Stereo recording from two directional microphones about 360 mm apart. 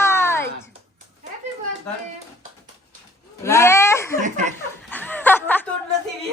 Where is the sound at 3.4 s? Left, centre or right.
Centre.